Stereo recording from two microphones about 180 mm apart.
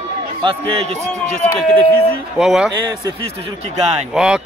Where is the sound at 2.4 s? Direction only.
5° right (ahead or behind).